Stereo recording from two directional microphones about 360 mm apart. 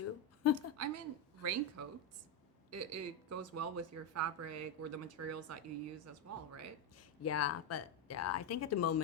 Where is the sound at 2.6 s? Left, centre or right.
Right.